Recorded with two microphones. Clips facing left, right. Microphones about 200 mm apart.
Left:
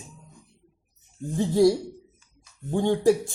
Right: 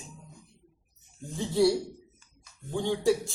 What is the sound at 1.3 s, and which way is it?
Speech, 45° left (ahead or behind).